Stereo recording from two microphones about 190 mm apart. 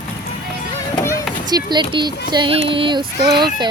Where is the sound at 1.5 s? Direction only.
20° right (ahead or behind).